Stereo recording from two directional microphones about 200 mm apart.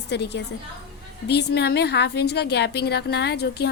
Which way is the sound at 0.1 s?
60° left (ahead or behind).